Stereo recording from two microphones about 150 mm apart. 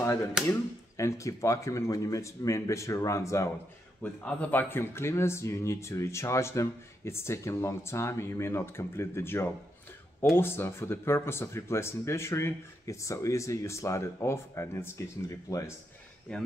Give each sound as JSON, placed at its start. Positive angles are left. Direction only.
{"t": 0.5, "sound": "speech", "side_deg": 20}
{"t": 4.0, "sound": "speech", "side_deg": 10}
{"t": 16.3, "sound": "speech", "side_deg": 5}